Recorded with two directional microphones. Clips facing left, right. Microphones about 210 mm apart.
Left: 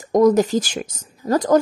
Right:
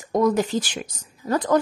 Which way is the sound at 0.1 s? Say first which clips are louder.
Left 6 dB; 40° left (ahead or behind).